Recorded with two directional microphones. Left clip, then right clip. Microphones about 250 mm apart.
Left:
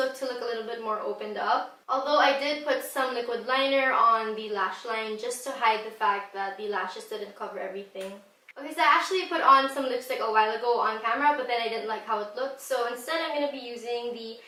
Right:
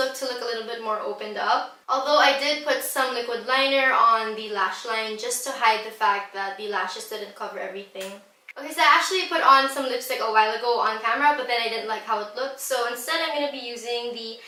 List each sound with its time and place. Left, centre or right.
0.0 s a woman's voice: centre
8.7 s a woman's voice: centre